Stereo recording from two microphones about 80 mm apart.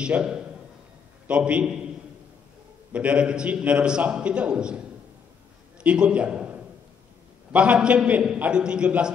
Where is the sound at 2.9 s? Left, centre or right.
Centre.